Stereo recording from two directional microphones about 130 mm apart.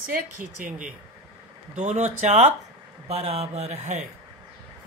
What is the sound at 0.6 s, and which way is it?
Speech, 90° right.